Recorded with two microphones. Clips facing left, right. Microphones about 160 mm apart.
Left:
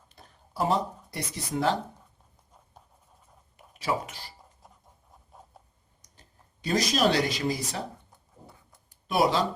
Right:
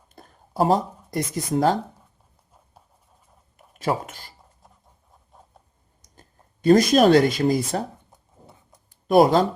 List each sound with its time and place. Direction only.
0.1 s a sound: 45° right (ahead or behind)
3.8 s speech: 50° right (ahead or behind)
4.6 s writing: centre (ahead or behind)
5.5 s a sound: centre (ahead or behind)
6.1 s speech: 50° right (ahead or behind)
9.0 s speech: 50° right (ahead or behind)